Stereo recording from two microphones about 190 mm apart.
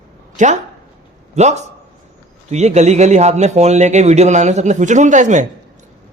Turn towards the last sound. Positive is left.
turn(degrees=-40)  # may be behind; listen again after turning